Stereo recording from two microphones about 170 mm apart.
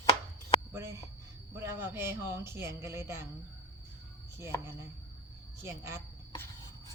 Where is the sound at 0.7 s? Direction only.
15° right (ahead or behind).